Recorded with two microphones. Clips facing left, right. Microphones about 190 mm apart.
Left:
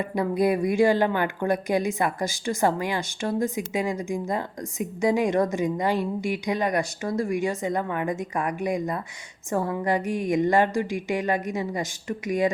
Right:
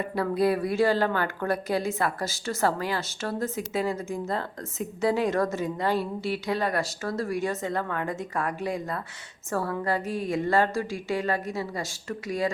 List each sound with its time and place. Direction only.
0.2 s speech: 15° left (ahead or behind)